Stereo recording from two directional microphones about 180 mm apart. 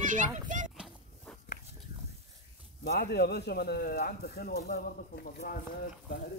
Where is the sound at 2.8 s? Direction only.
65° left (ahead or behind).